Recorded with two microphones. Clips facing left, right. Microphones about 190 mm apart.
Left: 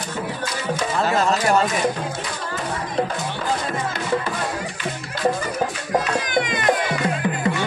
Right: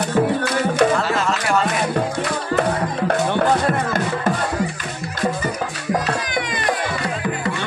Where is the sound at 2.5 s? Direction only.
65° right (ahead or behind).